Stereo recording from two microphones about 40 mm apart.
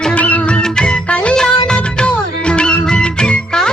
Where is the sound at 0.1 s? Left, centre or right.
Left.